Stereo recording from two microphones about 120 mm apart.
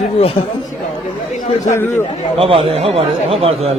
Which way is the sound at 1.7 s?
20° left (ahead or behind).